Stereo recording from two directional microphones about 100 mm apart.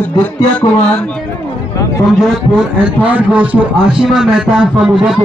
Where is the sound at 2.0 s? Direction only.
5° right (ahead or behind).